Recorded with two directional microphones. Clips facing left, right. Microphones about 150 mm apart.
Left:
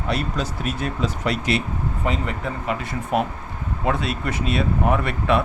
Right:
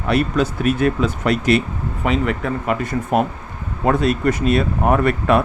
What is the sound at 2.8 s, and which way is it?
Speech, 45° right (ahead or behind).